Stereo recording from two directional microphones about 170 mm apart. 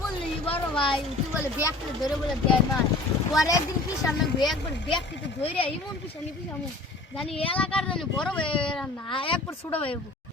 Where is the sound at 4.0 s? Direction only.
25° left (ahead or behind).